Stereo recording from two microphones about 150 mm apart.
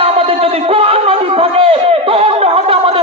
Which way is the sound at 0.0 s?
40° right (ahead or behind).